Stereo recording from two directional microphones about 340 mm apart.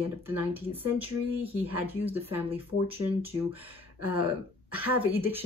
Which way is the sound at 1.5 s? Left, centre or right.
Centre.